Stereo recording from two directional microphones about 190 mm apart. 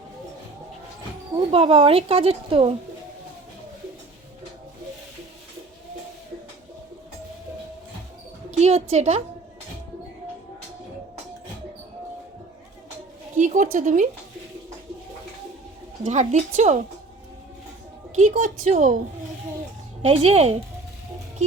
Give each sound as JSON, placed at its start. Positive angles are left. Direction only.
{"t": 1.5, "sound": "speech", "side_deg": -30}
{"t": 8.5, "sound": "speech", "side_deg": -35}
{"t": 13.3, "sound": "speech", "side_deg": -40}
{"t": 16.0, "sound": "speech", "side_deg": -40}
{"t": 18.2, "sound": "speech", "side_deg": -40}
{"t": 20.0, "sound": "speech", "side_deg": -35}